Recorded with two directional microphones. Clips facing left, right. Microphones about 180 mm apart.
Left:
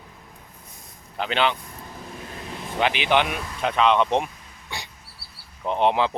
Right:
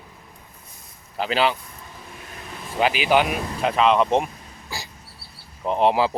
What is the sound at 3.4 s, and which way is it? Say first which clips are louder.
Speech: right 6 dB; 35° right (ahead or behind).